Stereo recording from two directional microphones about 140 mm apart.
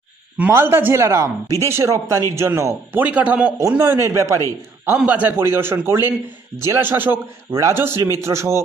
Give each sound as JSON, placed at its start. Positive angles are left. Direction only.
{"t": 0.4, "sound": "a man's voice", "side_deg": -15}
{"t": 4.9, "sound": "a man's voice", "side_deg": -10}